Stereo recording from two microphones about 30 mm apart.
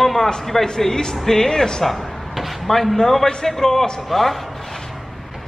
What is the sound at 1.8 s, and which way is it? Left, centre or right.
A man's voice, centre.